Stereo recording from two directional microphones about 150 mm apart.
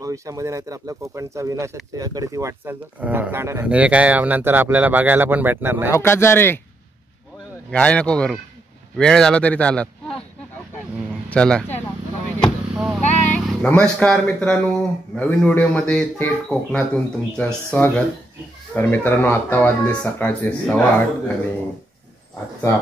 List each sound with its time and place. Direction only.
0.0 s speech: 20° right (ahead or behind)
5.9 s speech: 20° left (ahead or behind)
7.7 s speech: 10° left (ahead or behind)
11.2 s speech: 5° left (ahead or behind)
12.4 s a sound: 5° right (ahead or behind)
13.0 s vehicle: 50° left (ahead or behind)
13.3 s speech: 10° left (ahead or behind)